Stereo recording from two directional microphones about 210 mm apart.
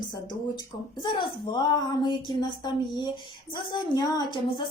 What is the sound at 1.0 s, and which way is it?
A woman's voice, 20° left (ahead or behind).